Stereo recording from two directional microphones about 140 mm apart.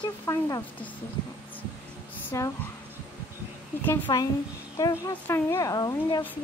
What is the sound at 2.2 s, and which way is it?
Speech, 20° left (ahead or behind).